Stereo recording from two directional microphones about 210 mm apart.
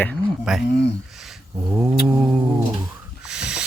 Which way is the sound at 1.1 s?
Centre (ahead or behind).